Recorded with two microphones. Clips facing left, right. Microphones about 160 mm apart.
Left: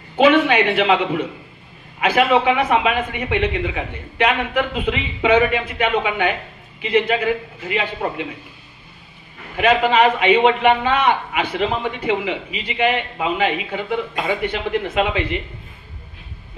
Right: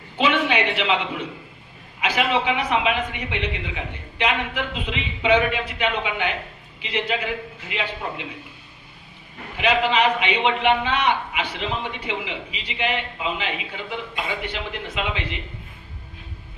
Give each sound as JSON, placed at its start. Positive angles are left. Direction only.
{"t": 0.2, "sound": "a man's voice", "side_deg": 55}
{"t": 9.6, "sound": "a man's voice", "side_deg": 50}